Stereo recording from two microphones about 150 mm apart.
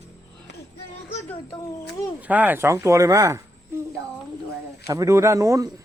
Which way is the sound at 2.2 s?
10° right (ahead or behind).